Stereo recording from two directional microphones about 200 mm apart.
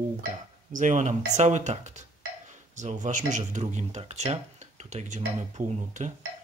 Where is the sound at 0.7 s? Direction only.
40° right (ahead or behind).